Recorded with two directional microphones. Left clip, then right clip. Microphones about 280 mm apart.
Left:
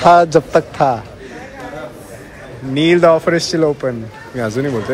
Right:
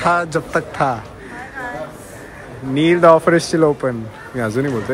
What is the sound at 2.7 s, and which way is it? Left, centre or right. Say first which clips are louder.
Speech: even; centre.